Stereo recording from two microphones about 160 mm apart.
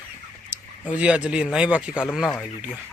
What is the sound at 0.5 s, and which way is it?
Speech, 10° right (ahead or behind).